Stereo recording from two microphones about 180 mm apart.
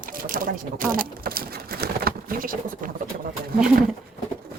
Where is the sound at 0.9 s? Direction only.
55° right (ahead or behind).